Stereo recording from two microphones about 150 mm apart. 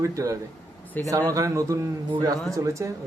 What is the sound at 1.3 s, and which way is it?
Speech, 20° right (ahead or behind).